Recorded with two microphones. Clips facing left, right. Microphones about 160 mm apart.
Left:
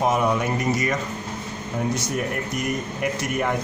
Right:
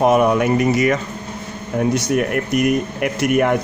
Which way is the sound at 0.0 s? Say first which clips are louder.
Right 7 dB; 65° right (ahead or behind).